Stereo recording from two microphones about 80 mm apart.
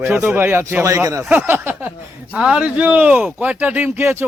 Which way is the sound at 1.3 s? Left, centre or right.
Right.